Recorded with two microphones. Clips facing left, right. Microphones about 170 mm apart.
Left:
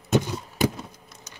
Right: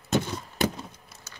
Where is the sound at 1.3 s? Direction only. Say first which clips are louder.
Even; 15° left (ahead or behind).